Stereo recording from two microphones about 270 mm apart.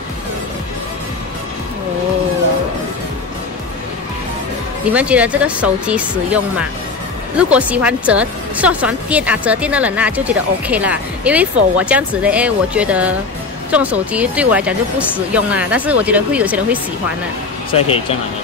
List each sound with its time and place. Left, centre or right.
4.9 s a woman's voice: centre
17.6 s speech: left